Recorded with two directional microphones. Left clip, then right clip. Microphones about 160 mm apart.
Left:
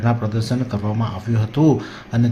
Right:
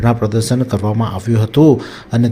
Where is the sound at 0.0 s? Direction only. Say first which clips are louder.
Right 7 dB; 35° right (ahead or behind).